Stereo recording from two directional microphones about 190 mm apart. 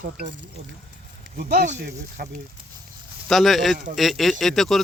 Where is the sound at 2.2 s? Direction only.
55° right (ahead or behind).